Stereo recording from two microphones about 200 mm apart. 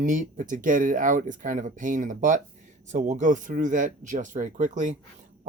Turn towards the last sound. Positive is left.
turn(degrees=-40)  # may be behind; listen again after turning